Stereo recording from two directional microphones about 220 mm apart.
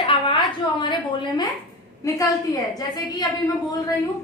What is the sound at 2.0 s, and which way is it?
Speech, 15° left (ahead or behind).